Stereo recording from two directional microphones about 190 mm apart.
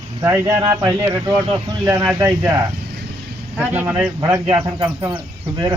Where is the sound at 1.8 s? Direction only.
10° right (ahead or behind).